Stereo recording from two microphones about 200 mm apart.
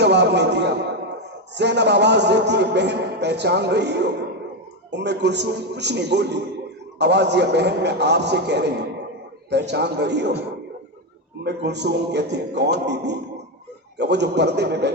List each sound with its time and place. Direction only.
0.0 s a man's voice: 60° right (ahead or behind)
11.4 s a man's voice: 55° right (ahead or behind)